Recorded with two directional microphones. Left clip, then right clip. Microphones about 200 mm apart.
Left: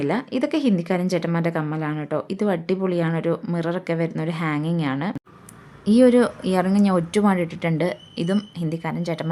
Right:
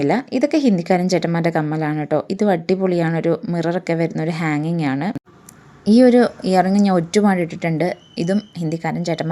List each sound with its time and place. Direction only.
0.0 s a woman's voice: 15° right (ahead or behind)